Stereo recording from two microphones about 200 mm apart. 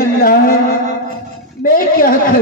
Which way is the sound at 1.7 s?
45° left (ahead or behind).